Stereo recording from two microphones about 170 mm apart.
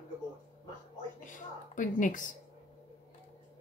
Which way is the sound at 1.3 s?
50° left (ahead or behind).